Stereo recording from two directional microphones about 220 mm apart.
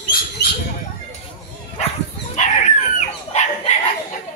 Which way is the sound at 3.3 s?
30° left (ahead or behind).